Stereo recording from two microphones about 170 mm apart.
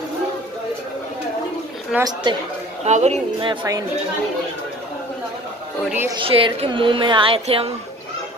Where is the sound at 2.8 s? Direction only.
40° right (ahead or behind).